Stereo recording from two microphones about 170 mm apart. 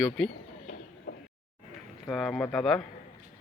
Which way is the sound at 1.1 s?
55° left (ahead or behind).